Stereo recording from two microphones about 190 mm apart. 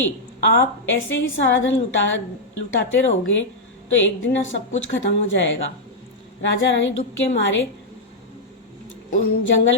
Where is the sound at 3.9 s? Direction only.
80° left.